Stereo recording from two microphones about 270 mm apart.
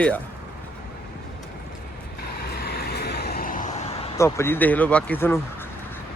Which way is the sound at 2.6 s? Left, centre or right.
Left.